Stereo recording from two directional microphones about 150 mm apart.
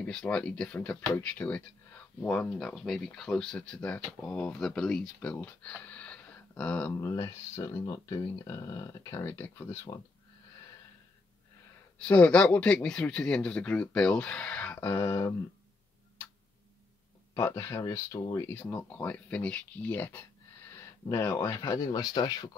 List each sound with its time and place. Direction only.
0.0 s speech: 5° left (ahead or behind)
6.9 s speech: 20° left (ahead or behind)
12.0 s speech: 10° left (ahead or behind)
17.3 s speech: 20° left (ahead or behind)